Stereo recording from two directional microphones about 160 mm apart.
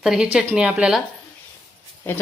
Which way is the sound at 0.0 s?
5° right (ahead or behind).